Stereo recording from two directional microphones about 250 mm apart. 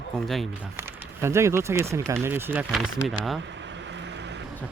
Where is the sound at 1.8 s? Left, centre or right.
Centre.